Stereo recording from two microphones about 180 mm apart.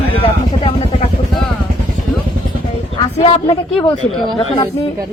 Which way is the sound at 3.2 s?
30° left (ahead or behind).